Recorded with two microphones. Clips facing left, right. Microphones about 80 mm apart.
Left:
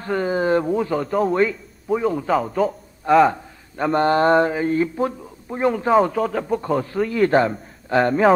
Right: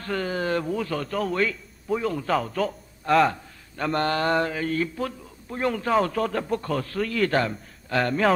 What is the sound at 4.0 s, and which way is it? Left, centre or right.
A man's voice, left.